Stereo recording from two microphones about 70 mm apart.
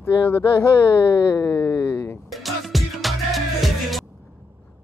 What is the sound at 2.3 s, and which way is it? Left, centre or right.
Music, centre.